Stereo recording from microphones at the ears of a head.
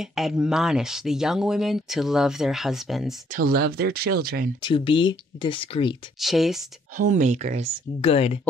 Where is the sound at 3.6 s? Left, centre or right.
Right.